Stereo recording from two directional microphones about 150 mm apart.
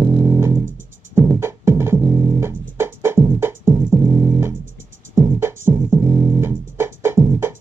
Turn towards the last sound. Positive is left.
turn(degrees=-15)  # may be behind; listen again after turning